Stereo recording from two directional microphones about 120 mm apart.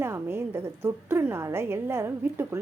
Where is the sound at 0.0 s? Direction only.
20° right (ahead or behind).